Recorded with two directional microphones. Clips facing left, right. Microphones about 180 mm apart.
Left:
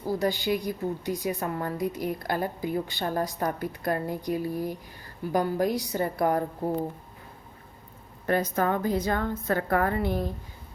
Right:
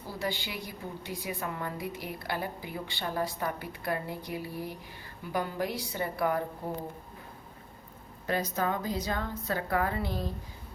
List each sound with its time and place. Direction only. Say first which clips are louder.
0.1 s a woman's voice: left 9 dB; 45° left (ahead or behind)
8.3 s a woman's voice: left 5 dB; 50° left (ahead or behind)